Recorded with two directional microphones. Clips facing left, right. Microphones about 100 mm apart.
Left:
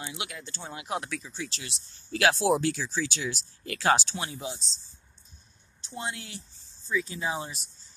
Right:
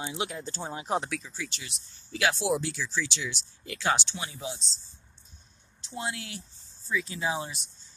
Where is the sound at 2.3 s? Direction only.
50° left (ahead or behind).